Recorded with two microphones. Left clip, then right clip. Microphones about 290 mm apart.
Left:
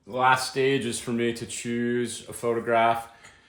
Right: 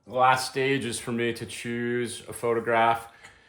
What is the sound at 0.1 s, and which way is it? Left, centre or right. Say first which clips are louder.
Speech: even; centre.